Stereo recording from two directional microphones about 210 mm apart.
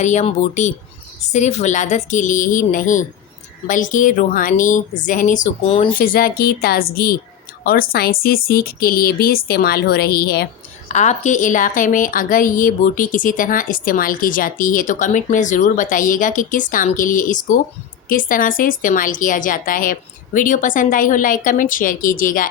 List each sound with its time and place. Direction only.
0.0 s a woman's voice: 35° left (ahead or behind)
6.0 s speech: 45° left (ahead or behind)
10.8 s a woman's voice: 35° left (ahead or behind)